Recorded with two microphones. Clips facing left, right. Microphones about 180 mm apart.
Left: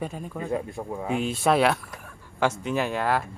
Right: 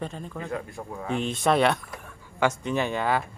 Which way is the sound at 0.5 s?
25° left (ahead or behind).